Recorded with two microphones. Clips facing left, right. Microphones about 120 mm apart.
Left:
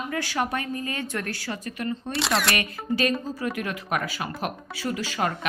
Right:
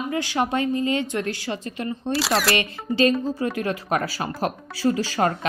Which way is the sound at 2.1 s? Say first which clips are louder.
Right 4 dB; centre (ahead or behind).